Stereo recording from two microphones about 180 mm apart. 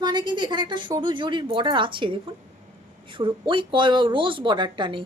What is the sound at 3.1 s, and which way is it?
Speech, 30° right (ahead or behind).